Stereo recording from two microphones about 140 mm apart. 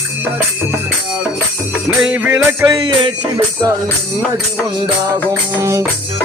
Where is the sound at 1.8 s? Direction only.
5° right (ahead or behind).